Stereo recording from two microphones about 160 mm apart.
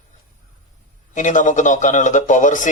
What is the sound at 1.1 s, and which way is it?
Speech, 50° left (ahead or behind).